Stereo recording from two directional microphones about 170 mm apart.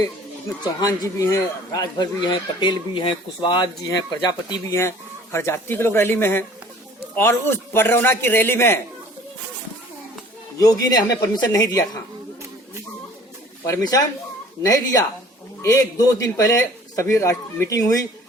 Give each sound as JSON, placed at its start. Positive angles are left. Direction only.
{"t": 0.6, "sound": "speech", "side_deg": 20}
{"t": 4.7, "sound": "speech", "side_deg": 15}
{"t": 10.6, "sound": "speech", "side_deg": 20}
{"t": 13.7, "sound": "speech", "side_deg": 20}